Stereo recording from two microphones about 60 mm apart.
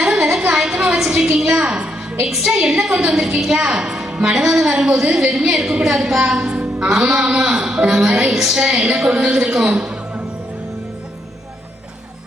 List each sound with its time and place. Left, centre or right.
0.0 s a sound: centre
1.1 s a woman's voice: centre
8.3 s a woman's voice: centre